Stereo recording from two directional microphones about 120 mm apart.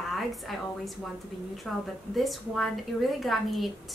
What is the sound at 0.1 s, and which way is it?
A woman's voice, centre (ahead or behind).